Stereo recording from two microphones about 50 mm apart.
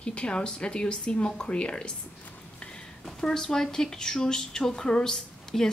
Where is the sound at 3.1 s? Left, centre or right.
Centre.